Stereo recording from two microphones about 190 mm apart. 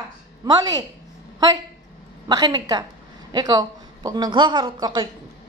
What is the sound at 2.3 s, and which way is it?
Speech, 20° right (ahead or behind).